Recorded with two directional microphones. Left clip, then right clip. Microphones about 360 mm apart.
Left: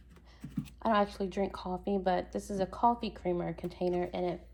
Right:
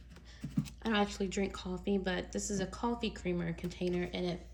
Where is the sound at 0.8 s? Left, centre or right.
Left.